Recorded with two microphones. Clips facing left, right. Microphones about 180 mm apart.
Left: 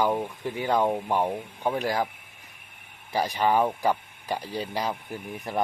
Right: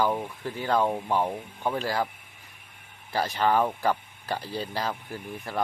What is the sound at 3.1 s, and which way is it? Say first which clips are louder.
Speech: left 1 dB; 15° left (ahead or behind).